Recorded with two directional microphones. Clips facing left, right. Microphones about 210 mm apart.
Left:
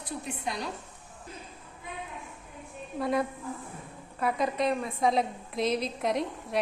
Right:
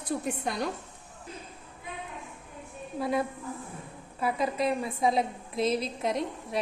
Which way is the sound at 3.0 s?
Centre (ahead or behind).